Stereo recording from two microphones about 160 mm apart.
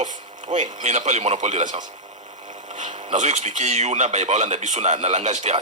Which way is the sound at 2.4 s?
50° right (ahead or behind).